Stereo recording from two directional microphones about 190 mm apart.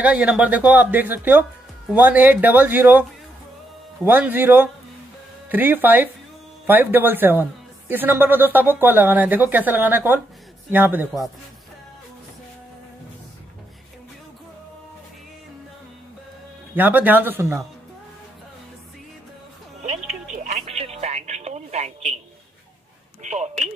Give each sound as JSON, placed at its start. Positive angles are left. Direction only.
{"t": 0.0, "sound": "speech", "side_deg": -5}
{"t": 16.7, "sound": "speech", "side_deg": -10}
{"t": 20.5, "sound": "telephone", "side_deg": -30}
{"t": 23.2, "sound": "speech", "side_deg": -35}